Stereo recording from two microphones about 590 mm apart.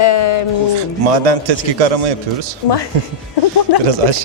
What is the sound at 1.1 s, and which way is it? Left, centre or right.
A man's voice, right.